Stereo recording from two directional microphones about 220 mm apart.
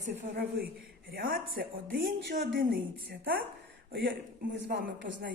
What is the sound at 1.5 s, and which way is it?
Speech, 40° right (ahead or behind).